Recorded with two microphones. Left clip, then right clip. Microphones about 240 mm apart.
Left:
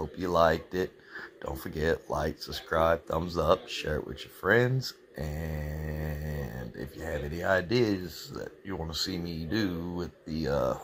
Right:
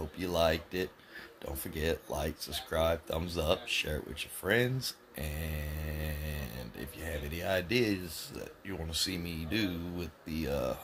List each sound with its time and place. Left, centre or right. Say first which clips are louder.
0.0 s speech: left 5 dB; centre
7.4 s speech: left 4 dB; centre